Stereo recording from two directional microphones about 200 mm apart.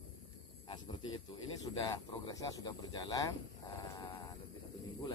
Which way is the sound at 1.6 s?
20° left (ahead or behind).